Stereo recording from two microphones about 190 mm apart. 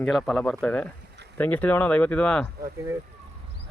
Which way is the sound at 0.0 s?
Centre (ahead or behind).